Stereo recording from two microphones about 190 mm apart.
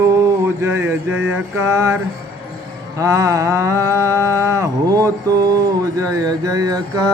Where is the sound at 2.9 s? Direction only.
15° right (ahead or behind).